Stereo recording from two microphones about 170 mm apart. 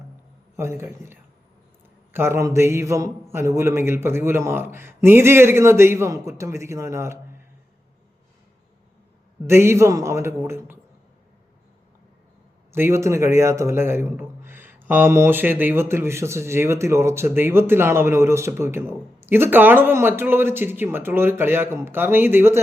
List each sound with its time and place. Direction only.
0.5 s a man's voice: 15° right (ahead or behind)
9.5 s a man's voice: 15° right (ahead or behind)
12.7 s a man's voice: 15° right (ahead or behind)